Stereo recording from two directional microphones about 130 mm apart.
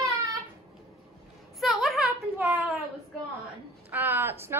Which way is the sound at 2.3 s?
15° right (ahead or behind).